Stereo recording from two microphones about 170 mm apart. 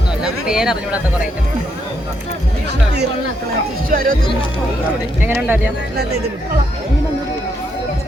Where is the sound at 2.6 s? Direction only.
80° right.